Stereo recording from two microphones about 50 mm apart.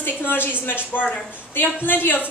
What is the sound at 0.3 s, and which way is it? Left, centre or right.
A woman's voice, left.